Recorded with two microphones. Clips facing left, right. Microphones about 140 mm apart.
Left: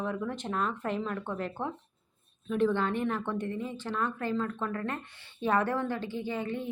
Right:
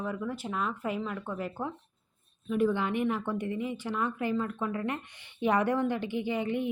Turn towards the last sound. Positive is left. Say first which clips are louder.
# right 3 dB
turn(degrees=-15)  # may be behind; listen again after turning